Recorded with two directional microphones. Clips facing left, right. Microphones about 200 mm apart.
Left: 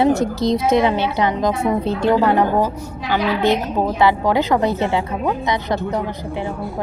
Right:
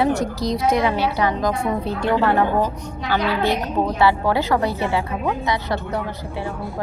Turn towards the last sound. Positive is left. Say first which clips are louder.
# left 3 dB
turn(degrees=20)  # may be behind; listen again after turning